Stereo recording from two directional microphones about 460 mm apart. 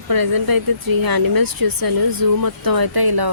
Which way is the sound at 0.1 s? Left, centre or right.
Right.